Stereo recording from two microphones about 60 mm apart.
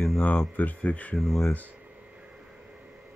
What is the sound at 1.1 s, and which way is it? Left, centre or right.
Speech, centre.